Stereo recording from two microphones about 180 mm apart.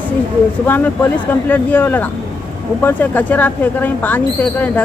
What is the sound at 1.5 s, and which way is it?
Speech, 10° left (ahead or behind).